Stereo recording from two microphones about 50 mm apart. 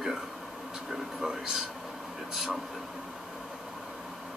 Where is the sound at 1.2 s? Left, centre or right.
Centre.